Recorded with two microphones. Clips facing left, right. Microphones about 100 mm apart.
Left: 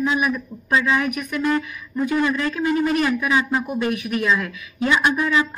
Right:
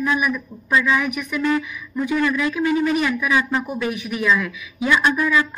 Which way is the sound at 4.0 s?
50° left (ahead or behind).